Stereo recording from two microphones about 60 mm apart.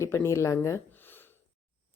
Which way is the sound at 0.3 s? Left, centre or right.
Left.